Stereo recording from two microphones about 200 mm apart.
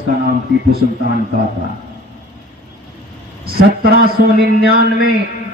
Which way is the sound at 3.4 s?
50° right (ahead or behind).